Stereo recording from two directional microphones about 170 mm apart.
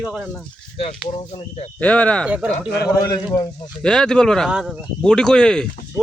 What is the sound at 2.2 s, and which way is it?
Speech, 5° right (ahead or behind).